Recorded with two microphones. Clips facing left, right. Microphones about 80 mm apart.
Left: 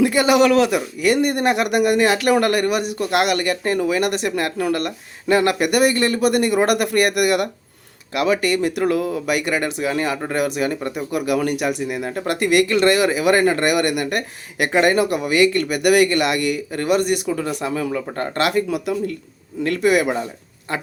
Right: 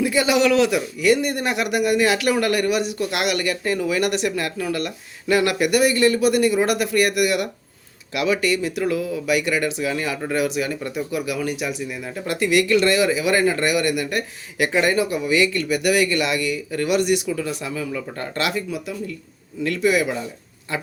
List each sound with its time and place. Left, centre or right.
0.0 s speech: left
18.7 s speech: left
19.6 s speech: left